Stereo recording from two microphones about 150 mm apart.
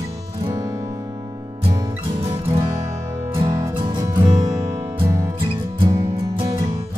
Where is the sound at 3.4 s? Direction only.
20° right (ahead or behind).